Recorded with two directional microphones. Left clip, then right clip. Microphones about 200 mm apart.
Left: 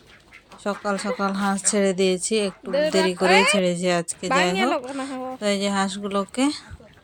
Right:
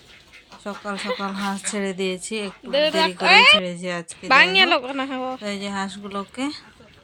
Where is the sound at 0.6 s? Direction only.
20° left (ahead or behind).